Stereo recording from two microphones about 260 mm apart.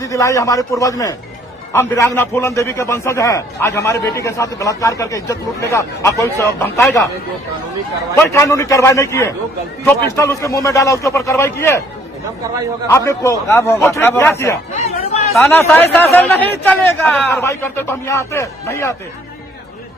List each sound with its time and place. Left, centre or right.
0.0 s a man's voice: centre
8.3 s a man's voice: centre
12.9 s a man's voice: centre
14.8 s chatter: left
15.3 s a man's voice: centre